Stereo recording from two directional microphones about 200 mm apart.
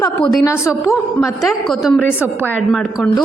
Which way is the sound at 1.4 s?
Centre (ahead or behind).